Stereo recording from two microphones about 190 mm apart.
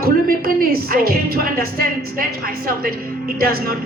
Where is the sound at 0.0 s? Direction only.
50° right (ahead or behind).